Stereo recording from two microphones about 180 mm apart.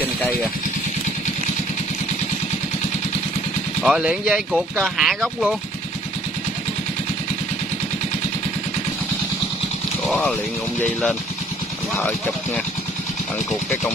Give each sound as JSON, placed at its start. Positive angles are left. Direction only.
{"t": 3.8, "sound": "speech", "side_deg": -5}
{"t": 10.0, "sound": "speech", "side_deg": 5}